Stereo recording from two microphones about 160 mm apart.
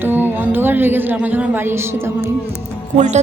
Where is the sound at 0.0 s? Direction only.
10° right (ahead or behind).